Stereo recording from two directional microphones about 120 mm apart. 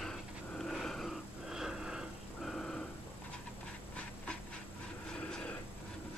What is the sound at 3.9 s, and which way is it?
Dog, 10° left (ahead or behind).